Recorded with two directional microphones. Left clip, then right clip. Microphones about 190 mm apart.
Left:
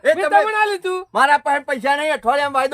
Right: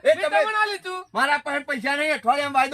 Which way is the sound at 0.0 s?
25° left (ahead or behind).